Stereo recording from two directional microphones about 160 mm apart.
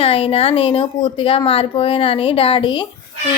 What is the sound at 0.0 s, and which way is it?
A woman's voice, 35° left (ahead or behind).